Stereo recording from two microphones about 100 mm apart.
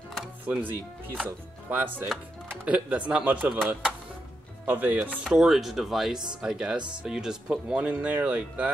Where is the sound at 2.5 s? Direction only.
15° right (ahead or behind).